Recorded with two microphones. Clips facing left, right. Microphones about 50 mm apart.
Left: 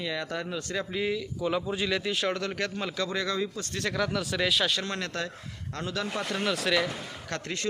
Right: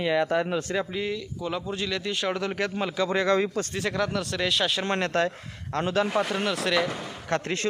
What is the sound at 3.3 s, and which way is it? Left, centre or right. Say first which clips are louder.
Speech: right 7 dB; right.